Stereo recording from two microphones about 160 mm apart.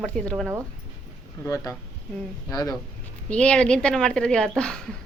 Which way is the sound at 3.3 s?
5° left (ahead or behind).